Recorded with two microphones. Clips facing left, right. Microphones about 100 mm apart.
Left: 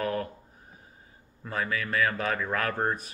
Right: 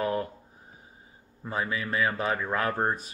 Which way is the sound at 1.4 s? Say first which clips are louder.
Even; 20° right (ahead or behind).